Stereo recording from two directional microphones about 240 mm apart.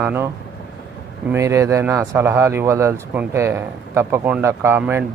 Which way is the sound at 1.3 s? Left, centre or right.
Centre.